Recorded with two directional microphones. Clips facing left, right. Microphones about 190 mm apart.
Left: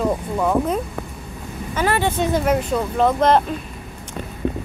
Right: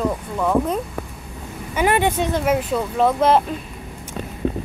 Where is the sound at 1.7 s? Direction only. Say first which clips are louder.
Right 2 dB; 15° right (ahead or behind).